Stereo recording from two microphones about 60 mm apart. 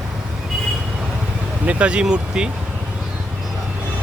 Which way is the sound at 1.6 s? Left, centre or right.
Centre.